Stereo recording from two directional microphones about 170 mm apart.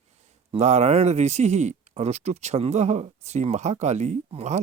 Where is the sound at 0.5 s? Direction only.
40° right (ahead or behind).